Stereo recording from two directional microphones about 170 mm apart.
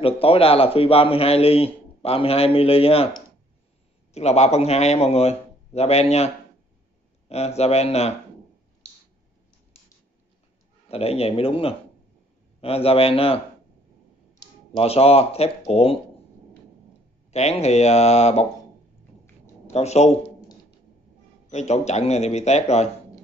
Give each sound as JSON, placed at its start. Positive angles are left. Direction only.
{"t": 0.0, "sound": "a man's voice", "side_deg": 35}
{"t": 10.9, "sound": "a man's voice", "side_deg": 35}
{"t": 14.8, "sound": "a man's voice", "side_deg": 35}
{"t": 17.3, "sound": "a man's voice", "side_deg": 40}
{"t": 19.7, "sound": "a man's voice", "side_deg": 40}
{"t": 21.5, "sound": "a man's voice", "side_deg": 40}